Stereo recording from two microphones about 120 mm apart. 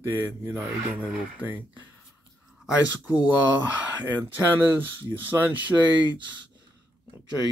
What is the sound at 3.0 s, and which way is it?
Speech, 15° right (ahead or behind).